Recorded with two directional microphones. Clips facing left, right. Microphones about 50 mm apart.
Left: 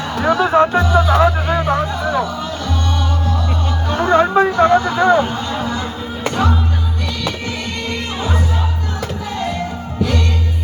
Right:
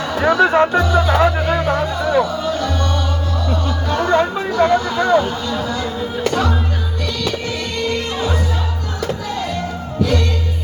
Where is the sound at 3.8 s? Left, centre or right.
Centre.